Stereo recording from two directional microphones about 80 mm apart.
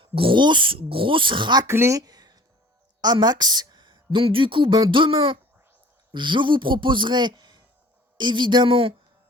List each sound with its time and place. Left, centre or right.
0.0 s speech: right
1.6 s speech: right
8.2 s speech: right